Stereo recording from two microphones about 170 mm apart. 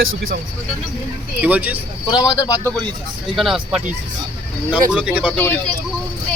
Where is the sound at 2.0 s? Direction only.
25° left (ahead or behind).